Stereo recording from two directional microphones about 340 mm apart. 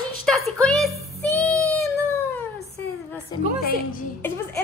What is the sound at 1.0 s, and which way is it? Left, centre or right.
Child singing, centre.